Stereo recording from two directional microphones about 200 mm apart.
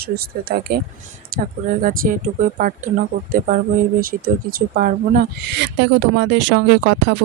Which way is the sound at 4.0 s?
45° right (ahead or behind).